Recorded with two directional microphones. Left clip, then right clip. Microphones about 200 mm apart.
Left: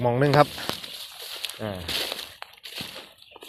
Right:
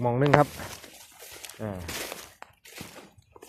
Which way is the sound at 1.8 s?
30° left (ahead or behind).